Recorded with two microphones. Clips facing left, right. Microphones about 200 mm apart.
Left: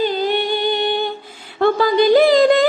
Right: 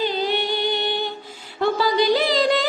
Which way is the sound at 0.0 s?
50° left (ahead or behind).